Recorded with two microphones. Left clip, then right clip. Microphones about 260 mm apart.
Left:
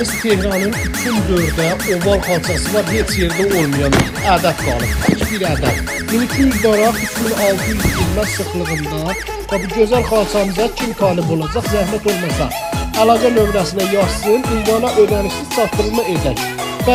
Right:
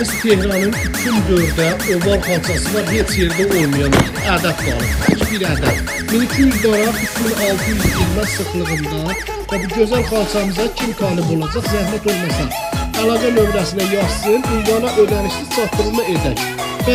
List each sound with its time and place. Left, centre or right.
0.0 s speech: centre
9.5 s speech: centre